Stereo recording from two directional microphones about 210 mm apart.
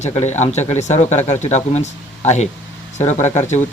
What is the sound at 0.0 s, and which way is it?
Speech, 30° left (ahead or behind).